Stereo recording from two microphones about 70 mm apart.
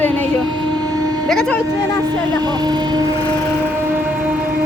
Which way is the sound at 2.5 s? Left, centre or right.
Right.